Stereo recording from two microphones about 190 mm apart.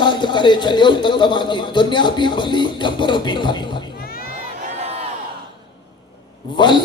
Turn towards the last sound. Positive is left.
turn(degrees=25)  # may be behind; listen again after turning